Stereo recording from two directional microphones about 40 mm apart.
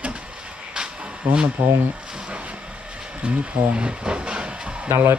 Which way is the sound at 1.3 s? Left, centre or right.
Right.